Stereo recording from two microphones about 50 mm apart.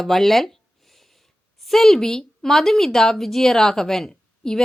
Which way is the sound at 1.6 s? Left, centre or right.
Centre.